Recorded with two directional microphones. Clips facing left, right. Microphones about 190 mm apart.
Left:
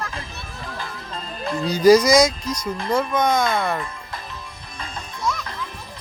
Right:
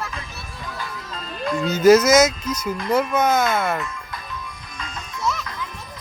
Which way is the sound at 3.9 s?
30° left (ahead or behind).